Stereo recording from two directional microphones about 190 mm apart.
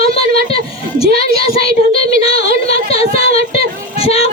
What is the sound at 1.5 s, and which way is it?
Child singing, 30° left (ahead or behind).